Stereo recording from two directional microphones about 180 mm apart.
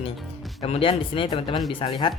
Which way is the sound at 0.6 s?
30° left (ahead or behind).